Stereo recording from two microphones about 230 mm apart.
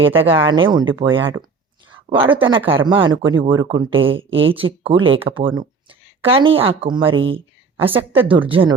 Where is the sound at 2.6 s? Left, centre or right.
Right.